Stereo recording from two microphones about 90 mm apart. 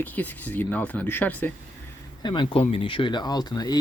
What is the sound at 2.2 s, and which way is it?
Speech, 65° left (ahead or behind).